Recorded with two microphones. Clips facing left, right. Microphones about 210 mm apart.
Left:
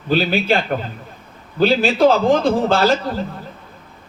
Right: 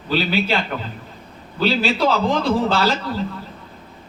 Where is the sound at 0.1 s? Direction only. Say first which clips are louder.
Left 3 dB; 50° left (ahead or behind).